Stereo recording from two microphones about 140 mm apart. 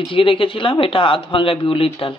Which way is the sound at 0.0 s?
40° left (ahead or behind).